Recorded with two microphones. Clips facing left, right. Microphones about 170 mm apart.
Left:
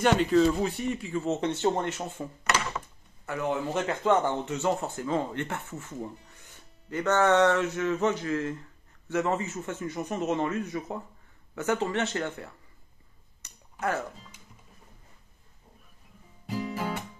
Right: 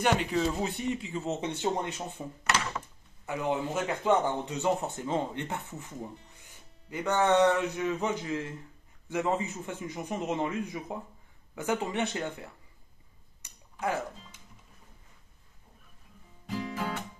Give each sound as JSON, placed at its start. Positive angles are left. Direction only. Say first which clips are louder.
{"t": 0.0, "sound": "speech", "louder": "left 5 dB", "side_deg": -10}
{"t": 0.6, "sound": "speech", "louder": "left 2 dB", "side_deg": -20}
{"t": 3.3, "sound": "a man's voice", "louder": "left 1 dB", "side_deg": -15}
{"t": 13.4, "sound": "a sound", "louder": "left 1 dB", "side_deg": -10}
{"t": 16.4, "sound": "music", "louder": "left 2 dB", "side_deg": 5}